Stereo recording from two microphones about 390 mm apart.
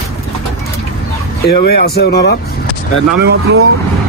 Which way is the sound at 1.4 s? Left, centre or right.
Left.